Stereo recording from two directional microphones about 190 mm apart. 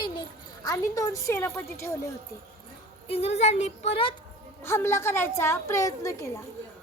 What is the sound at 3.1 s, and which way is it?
Speech, 30° left (ahead or behind).